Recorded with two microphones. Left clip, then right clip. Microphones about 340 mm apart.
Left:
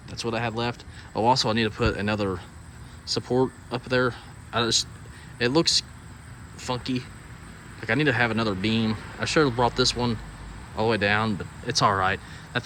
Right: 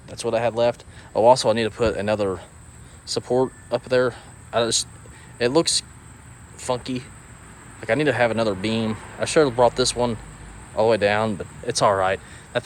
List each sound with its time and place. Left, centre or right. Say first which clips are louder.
0.1 s speech: right 6 dB; centre